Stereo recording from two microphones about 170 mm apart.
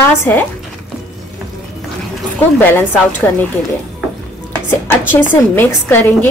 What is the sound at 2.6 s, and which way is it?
Speech, 10° left (ahead or behind).